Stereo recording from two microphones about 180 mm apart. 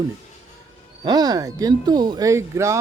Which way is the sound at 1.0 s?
20° right (ahead or behind).